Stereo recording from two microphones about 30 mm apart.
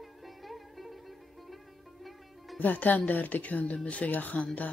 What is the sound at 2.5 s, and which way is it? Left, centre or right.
Speech, left.